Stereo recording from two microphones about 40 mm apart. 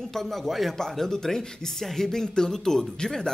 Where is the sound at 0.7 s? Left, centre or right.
Centre.